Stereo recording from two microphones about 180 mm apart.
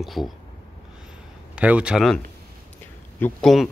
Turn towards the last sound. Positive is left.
turn(degrees=0)  # may be behind; listen again after turning